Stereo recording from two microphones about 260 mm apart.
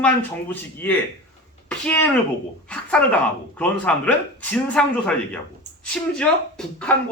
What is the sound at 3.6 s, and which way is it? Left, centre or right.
A man's voice, centre.